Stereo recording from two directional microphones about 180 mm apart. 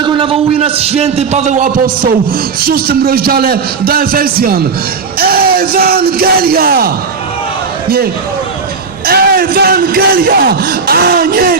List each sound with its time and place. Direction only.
0.0 s a man's voice: 25° right (ahead or behind); by 2.0 s 45° right (ahead or behind)
2.6 s a man's voice: 55° right (ahead or behind)
9.0 s a man's voice: 60° right (ahead or behind)